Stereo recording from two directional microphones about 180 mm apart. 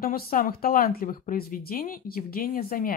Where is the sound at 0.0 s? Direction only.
55° left (ahead or behind).